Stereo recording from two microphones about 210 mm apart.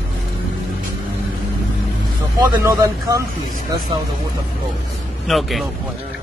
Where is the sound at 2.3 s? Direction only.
15° right (ahead or behind).